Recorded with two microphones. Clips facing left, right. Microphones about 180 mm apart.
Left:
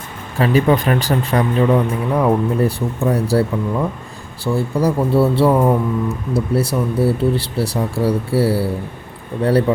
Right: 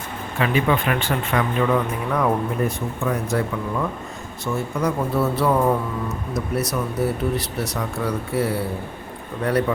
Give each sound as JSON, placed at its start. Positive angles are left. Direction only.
{"t": 0.3, "sound": "speech", "side_deg": 40}